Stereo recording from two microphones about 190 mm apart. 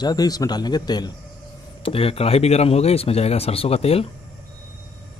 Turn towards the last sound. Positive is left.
turn(degrees=30)  # may be behind; listen again after turning